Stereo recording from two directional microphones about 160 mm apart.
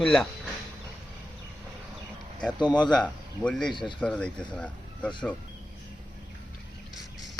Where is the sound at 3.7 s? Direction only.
30° left (ahead or behind).